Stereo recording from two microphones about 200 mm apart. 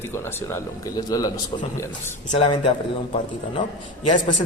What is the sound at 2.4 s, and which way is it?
Speech, 25° left (ahead or behind).